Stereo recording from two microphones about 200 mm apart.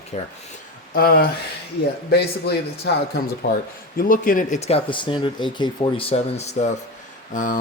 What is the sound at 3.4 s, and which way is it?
Speech, 45° left (ahead or behind).